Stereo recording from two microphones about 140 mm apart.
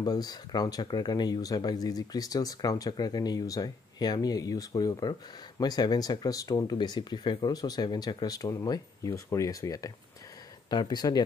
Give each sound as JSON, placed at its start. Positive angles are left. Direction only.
{"t": 0.0, "sound": "speech", "side_deg": 30}